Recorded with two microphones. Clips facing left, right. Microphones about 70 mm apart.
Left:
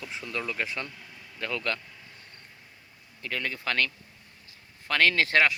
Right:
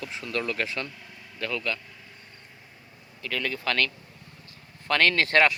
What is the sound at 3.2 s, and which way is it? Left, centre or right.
Speech, left.